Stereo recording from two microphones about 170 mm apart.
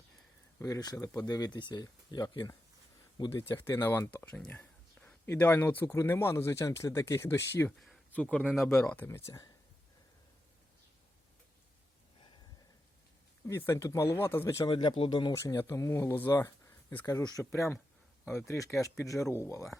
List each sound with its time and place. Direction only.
0.6 s speech: 20° left (ahead or behind)
3.7 s speech: 15° left (ahead or behind)
7.8 s speech: 5° left (ahead or behind)
8.9 s speech: 10° left (ahead or behind)
13.5 s speech: 15° left (ahead or behind)
14.6 s speech: 25° left (ahead or behind)